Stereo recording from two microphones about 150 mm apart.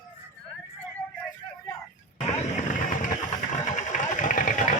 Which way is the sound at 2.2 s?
50° left (ahead or behind).